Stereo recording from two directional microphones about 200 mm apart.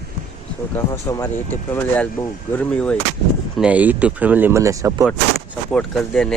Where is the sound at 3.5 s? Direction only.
5° right (ahead or behind).